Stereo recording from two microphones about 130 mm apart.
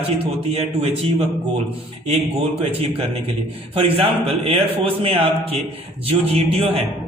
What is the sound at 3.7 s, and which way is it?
A man's voice, 45° right (ahead or behind).